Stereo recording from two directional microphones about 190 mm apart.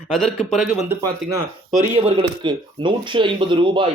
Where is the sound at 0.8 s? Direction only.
15° right (ahead or behind).